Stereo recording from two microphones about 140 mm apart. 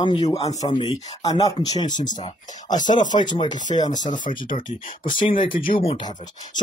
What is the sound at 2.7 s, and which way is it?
Speech, 65° left (ahead or behind).